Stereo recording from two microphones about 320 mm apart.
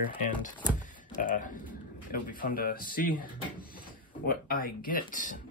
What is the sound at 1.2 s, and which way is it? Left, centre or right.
Speech, left.